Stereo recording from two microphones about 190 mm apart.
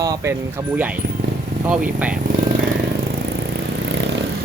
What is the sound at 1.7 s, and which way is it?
Speech, 5° right (ahead or behind).